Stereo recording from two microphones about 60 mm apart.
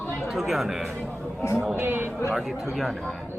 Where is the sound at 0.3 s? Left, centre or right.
Centre.